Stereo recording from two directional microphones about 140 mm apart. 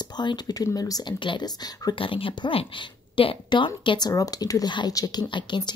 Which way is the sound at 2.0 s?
40° left (ahead or behind).